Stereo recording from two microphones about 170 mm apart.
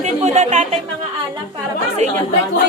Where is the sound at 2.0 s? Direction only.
40° right (ahead or behind).